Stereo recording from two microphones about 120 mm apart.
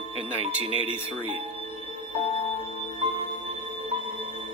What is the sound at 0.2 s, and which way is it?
Speech, 55° right (ahead or behind).